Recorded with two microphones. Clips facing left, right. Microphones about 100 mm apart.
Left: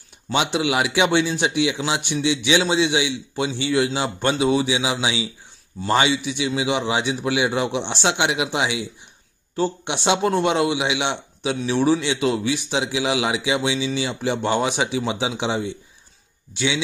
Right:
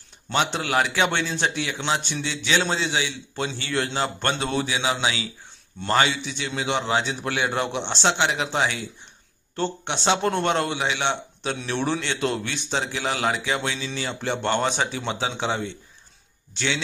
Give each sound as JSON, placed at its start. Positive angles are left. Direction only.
{"t": 0.3, "sound": "a man's voice", "side_deg": 10}
{"t": 6.1, "sound": "a man's voice", "side_deg": 10}
{"t": 10.0, "sound": "a man's voice", "side_deg": 10}
{"t": 11.5, "sound": "a man's voice", "side_deg": 5}